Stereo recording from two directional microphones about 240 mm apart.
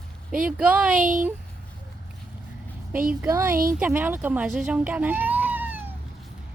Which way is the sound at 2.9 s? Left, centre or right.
Right.